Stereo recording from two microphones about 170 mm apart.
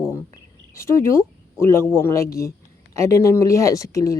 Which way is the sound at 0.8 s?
15° left (ahead or behind).